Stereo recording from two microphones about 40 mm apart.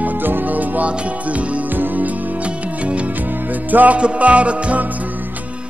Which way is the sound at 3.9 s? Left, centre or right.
Right.